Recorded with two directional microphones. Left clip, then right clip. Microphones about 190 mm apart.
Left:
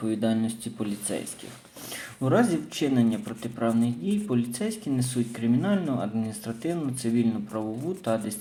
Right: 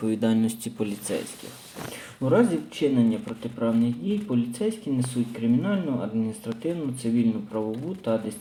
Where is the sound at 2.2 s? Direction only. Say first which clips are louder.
Right 2 dB; 5° right (ahead or behind).